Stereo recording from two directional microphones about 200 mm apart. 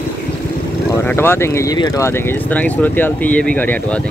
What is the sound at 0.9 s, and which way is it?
Speech, 10° left (ahead or behind).